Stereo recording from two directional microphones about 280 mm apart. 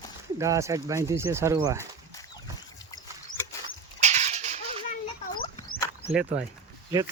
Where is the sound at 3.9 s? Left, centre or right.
Right.